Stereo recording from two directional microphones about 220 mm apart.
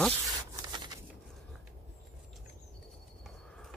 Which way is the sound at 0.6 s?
20° right (ahead or behind).